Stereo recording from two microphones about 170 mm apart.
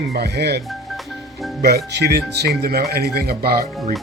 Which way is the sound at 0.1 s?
70° right (ahead or behind).